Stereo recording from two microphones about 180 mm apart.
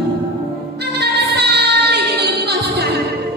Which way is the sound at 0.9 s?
65° right (ahead or behind).